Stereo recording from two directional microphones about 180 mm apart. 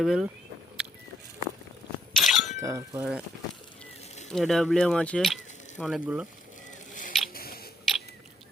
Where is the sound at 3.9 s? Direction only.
40° left (ahead or behind).